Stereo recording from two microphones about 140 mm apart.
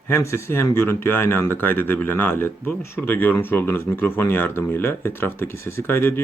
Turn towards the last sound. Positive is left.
turn(degrees=15)  # may be behind; listen again after turning